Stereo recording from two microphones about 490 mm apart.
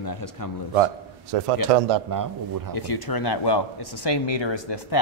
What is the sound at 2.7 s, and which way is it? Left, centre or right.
Speech, left.